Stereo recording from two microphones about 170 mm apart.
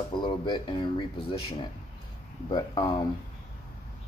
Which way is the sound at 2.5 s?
25° left (ahead or behind).